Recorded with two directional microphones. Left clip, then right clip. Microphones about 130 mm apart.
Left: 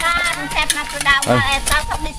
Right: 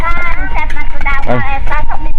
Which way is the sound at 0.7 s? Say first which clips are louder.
Left 3 dB; 40° left (ahead or behind).